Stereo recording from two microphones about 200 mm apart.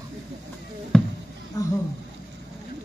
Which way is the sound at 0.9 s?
5° left (ahead or behind).